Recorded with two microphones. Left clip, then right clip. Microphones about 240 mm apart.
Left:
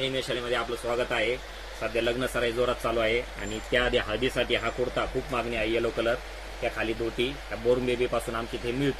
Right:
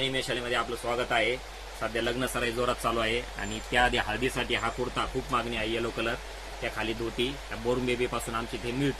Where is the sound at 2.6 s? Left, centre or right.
Right.